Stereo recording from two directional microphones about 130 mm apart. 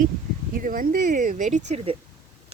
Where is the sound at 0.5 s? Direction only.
90° right.